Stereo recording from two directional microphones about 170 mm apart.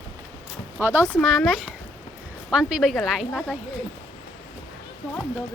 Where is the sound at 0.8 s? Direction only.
10° right (ahead or behind).